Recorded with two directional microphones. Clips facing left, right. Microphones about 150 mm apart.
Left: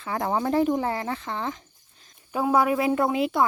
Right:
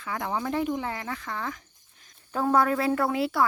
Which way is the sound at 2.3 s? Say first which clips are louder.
Left 2 dB; 10° left (ahead or behind).